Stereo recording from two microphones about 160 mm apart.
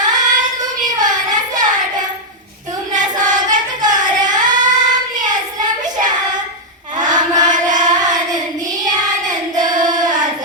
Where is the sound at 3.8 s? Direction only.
25° right (ahead or behind).